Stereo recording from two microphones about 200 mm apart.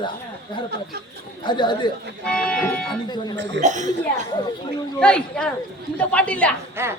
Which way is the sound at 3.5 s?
35° right (ahead or behind).